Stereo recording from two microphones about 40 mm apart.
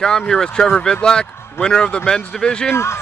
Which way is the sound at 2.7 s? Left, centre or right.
Left.